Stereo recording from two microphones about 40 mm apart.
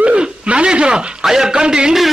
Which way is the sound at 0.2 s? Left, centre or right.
Right.